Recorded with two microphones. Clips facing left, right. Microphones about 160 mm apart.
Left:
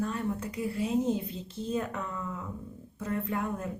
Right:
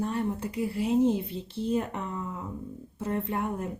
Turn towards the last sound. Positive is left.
turn(degrees=-30)  # may be behind; listen again after turning